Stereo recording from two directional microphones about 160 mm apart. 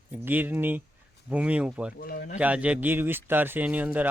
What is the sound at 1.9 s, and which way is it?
Speech, 80° left.